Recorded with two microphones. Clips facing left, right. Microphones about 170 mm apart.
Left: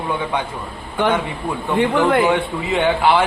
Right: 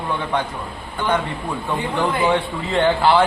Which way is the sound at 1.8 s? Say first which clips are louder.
Left 7 dB; 70° left (ahead or behind).